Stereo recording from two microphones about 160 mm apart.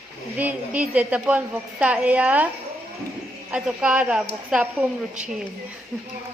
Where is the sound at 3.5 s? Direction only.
10° right (ahead or behind).